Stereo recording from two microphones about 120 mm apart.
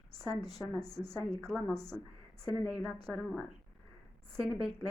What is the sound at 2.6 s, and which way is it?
Speech, centre (ahead or behind).